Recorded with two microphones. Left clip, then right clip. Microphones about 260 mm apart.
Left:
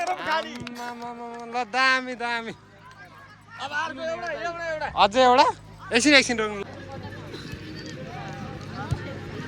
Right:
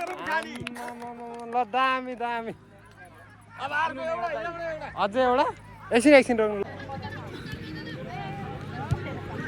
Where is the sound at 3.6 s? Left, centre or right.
Right.